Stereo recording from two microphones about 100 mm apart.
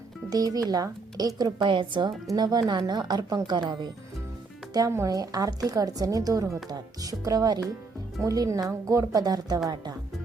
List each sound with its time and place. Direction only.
0.3 s a woman's voice: 40° right (ahead or behind)
2.3 s speech: 40° right (ahead or behind)
4.9 s speech: 25° right (ahead or behind)
5.1 s a woman's voice: 40° right (ahead or behind)